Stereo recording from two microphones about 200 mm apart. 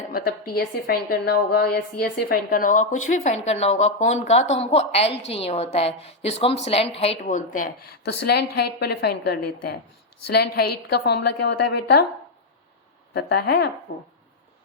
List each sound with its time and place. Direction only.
0.1 s a woman's voice: 50° left (ahead or behind)
13.1 s a woman's voice: 55° left (ahead or behind)